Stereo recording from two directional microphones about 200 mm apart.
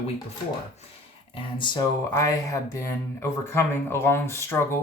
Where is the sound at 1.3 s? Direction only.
25° left (ahead or behind).